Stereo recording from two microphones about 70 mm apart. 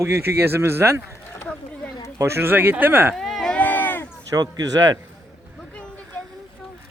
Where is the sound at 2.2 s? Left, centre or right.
Right.